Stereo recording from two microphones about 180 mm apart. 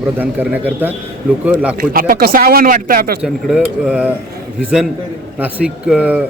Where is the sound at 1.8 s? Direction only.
50° right (ahead or behind).